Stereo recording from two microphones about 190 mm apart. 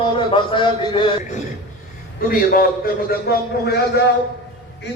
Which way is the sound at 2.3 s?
50° left (ahead or behind).